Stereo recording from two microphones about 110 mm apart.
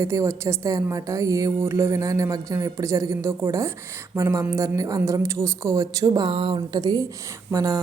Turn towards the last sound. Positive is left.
turn(degrees=-35)  # may be behind; listen again after turning